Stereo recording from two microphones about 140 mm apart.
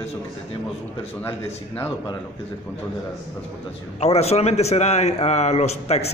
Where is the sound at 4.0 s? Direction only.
50° left (ahead or behind).